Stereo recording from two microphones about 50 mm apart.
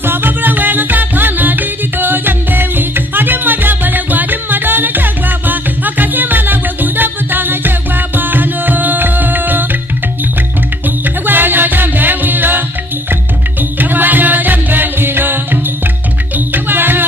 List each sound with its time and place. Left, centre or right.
0.0 s music: right
11.2 s music: right